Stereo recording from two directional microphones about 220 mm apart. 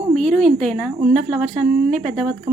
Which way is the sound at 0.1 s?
5° left (ahead or behind).